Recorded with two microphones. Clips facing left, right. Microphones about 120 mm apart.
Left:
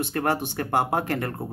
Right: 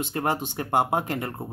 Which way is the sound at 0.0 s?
15° right (ahead or behind).